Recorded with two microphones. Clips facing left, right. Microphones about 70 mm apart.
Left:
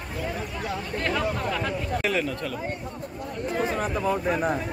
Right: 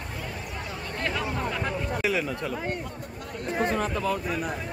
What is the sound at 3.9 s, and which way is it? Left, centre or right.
Speech, left.